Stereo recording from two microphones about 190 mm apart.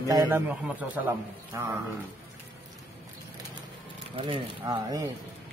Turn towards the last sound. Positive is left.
turn(degrees=-20)  # may be behind; listen again after turning